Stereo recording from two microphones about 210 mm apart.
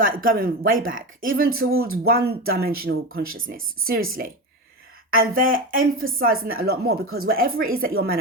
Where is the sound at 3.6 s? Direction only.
75° right (ahead or behind).